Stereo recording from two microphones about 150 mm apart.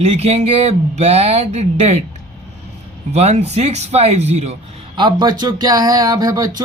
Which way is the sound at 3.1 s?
45° right (ahead or behind).